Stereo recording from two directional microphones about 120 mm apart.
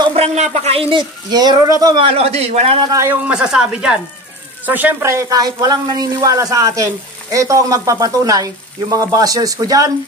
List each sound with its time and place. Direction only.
0.1 s speech: 65° right (ahead or behind)
1.3 s speech: 35° right (ahead or behind)
2.0 s a man's voice: 60° right (ahead or behind)
2.8 s speech: 30° right (ahead or behind)
3.1 s speech: 10° right (ahead or behind); by 9.9 s 30° right (ahead or behind)